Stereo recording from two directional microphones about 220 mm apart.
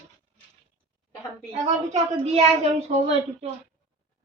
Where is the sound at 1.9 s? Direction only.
30° right (ahead or behind).